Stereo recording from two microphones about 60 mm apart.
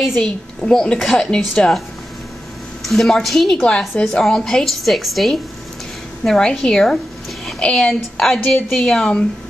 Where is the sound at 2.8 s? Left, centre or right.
Centre.